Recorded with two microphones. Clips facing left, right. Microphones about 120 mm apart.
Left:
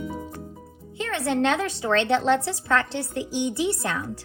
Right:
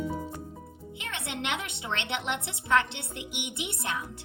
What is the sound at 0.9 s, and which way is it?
Speech, 20° right (ahead or behind).